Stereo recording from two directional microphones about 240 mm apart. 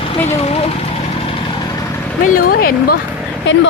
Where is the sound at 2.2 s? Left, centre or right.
Left.